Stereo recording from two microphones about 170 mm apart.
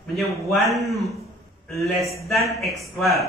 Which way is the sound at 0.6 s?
Centre (ahead or behind).